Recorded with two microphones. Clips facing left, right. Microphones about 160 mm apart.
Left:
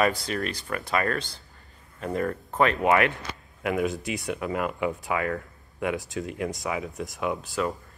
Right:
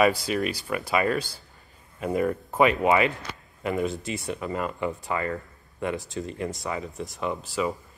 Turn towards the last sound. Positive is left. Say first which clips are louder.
# even
turn(degrees=0)  # may be behind; listen again after turning